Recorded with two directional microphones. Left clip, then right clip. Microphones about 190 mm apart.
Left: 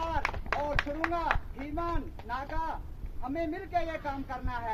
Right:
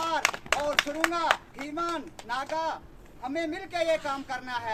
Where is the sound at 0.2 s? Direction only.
35° right (ahead or behind).